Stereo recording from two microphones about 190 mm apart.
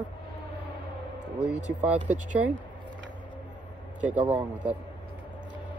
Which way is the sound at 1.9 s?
40° right (ahead or behind).